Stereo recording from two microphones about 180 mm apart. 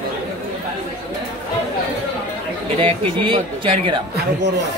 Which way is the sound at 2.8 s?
30° right (ahead or behind).